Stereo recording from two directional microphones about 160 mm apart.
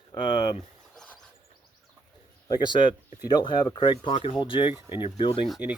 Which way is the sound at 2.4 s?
25° left (ahead or behind).